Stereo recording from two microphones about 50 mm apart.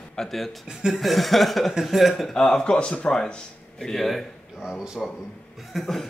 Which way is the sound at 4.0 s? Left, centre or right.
Centre.